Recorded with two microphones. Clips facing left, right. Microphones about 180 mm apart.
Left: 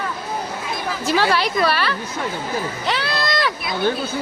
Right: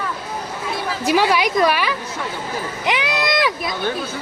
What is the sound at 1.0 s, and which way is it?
Speech, 15° right (ahead or behind).